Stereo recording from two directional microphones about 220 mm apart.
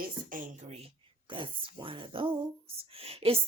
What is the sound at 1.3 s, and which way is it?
A woman's voice, 25° right (ahead or behind).